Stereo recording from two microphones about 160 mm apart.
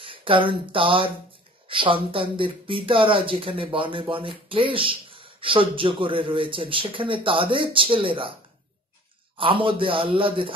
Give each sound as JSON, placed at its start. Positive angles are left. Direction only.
{"t": 0.0, "sound": "speech", "side_deg": -35}
{"t": 9.4, "sound": "speech", "side_deg": -35}